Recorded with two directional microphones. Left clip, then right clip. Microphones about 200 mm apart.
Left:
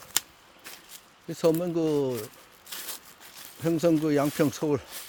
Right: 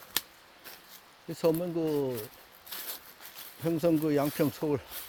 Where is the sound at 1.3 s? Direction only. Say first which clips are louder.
Left 4 dB; 15° left (ahead or behind).